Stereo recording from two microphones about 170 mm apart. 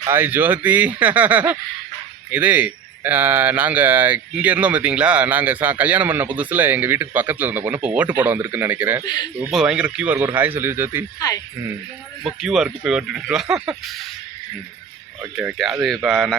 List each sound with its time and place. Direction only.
0.0 s speech: 10° right (ahead or behind)
9.0 s speech: 25° left (ahead or behind)
9.5 s speech: 5° right (ahead or behind)
12.2 s speech: centre (ahead or behind)
15.2 s speech: 10° right (ahead or behind)
16.0 s speech: centre (ahead or behind)